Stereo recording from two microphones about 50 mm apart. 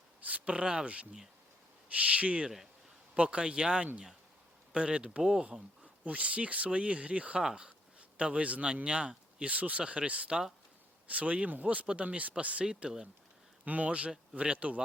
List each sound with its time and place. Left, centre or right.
0.2 s a sound: right
0.5 s speech: centre
11.1 s speech: right
13.7 s speech: right